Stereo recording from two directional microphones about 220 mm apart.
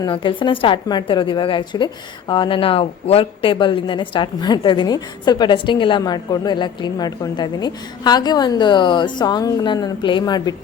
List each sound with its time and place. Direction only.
0.0 s a woman's voice: 20° left (ahead or behind)